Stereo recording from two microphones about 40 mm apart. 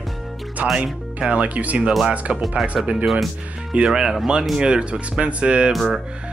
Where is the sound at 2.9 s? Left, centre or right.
Centre.